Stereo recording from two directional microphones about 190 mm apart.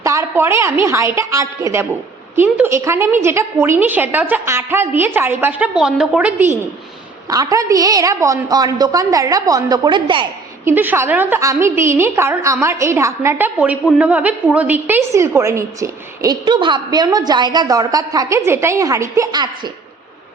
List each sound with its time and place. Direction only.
0.0 s a woman's voice: 15° right (ahead or behind)
10.7 s a woman's voice: 10° right (ahead or behind)